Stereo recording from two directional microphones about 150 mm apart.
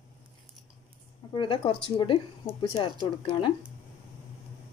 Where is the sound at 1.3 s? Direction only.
35° left (ahead or behind).